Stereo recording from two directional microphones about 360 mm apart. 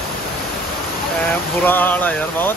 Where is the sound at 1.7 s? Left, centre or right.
Centre.